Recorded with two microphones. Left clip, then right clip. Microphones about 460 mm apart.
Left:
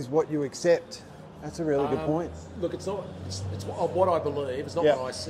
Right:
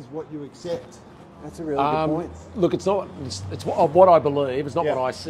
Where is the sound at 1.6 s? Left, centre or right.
Left.